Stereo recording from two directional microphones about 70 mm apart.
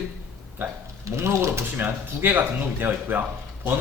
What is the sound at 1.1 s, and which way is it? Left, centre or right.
Speech, right.